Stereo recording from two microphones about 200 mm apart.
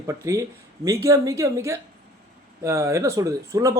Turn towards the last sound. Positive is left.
turn(degrees=-15)  # may be behind; listen again after turning